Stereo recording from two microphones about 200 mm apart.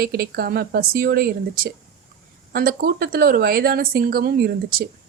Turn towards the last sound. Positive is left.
turn(degrees=-50)  # may be behind; listen again after turning